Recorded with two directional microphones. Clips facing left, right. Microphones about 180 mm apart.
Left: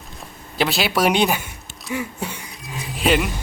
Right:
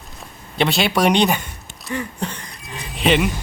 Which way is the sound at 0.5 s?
Centre (ahead or behind).